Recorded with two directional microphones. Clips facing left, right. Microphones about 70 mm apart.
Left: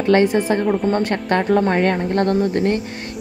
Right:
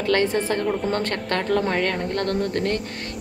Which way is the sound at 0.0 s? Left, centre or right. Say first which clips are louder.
Left 6 dB; centre.